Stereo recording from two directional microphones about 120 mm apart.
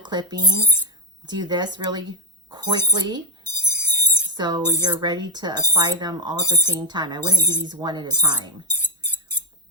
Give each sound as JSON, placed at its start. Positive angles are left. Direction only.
{"t": 0.0, "sound": "speech", "side_deg": -40}
{"t": 3.7, "sound": "music", "side_deg": 20}
{"t": 4.3, "sound": "speech", "side_deg": -35}
{"t": 8.8, "sound": "a sound", "side_deg": 15}